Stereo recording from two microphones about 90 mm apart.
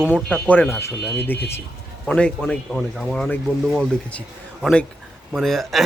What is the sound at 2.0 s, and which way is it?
Speech, 10° left (ahead or behind).